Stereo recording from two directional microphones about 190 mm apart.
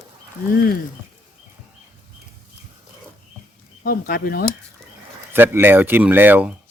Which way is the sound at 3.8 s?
50° left (ahead or behind).